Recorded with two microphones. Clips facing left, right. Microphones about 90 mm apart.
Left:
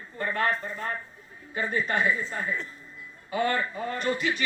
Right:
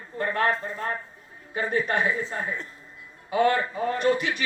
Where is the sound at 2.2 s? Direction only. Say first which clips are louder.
Right 1 dB; 25° right (ahead or behind).